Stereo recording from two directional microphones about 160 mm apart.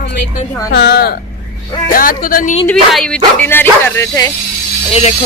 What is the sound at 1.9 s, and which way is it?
Speech, 60° left (ahead or behind).